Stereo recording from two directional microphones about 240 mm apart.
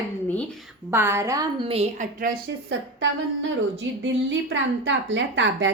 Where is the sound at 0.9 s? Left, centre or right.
Centre.